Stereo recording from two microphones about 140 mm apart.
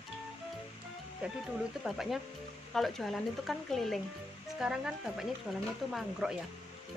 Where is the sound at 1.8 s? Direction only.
Centre (ahead or behind).